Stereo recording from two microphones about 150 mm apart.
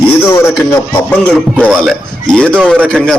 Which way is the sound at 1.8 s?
Centre (ahead or behind).